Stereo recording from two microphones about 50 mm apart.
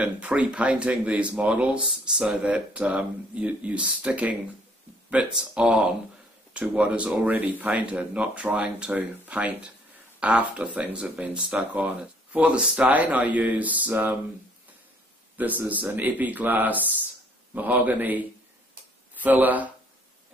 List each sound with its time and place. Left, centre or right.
0.0 s speech: right
2.4 s speech: right
5.1 s speech: centre; by 14.1 s right
15.3 s a man's voice: right